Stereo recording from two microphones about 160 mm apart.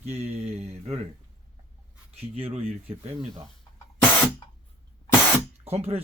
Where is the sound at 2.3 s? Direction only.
35° right (ahead or behind).